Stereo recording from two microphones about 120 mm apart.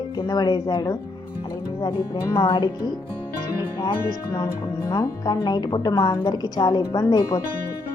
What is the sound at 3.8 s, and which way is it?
Speech, 35° left (ahead or behind).